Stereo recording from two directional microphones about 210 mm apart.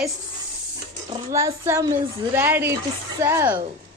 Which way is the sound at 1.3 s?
15° right (ahead or behind).